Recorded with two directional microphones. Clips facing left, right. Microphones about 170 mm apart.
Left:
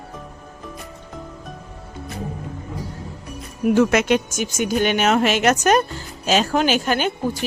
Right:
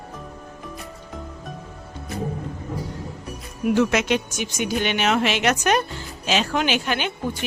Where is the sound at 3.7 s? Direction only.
50° left (ahead or behind).